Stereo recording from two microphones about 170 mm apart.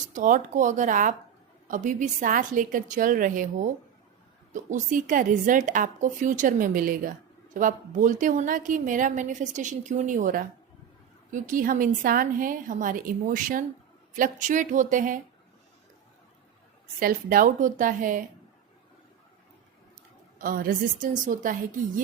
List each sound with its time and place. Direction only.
0.1 s a woman's voice: 50° right (ahead or behind)
17.0 s a woman's voice: 60° right (ahead or behind)
20.4 s a woman's voice: 55° right (ahead or behind)